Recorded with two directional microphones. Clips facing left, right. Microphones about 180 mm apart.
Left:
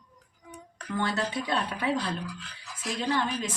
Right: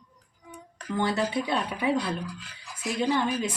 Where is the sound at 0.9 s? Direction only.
15° right (ahead or behind).